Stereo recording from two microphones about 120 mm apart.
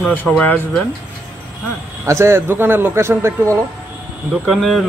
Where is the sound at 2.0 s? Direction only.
20° right (ahead or behind).